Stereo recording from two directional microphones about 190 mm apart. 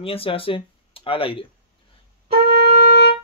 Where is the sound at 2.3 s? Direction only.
55° right (ahead or behind).